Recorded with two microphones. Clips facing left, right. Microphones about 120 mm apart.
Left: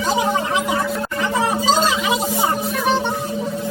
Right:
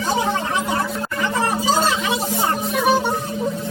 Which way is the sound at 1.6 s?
15° left (ahead or behind).